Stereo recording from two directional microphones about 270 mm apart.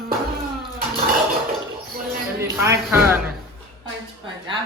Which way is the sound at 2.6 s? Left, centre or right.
Centre.